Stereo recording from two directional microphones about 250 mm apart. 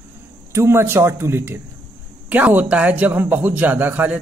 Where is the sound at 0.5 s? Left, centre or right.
Centre.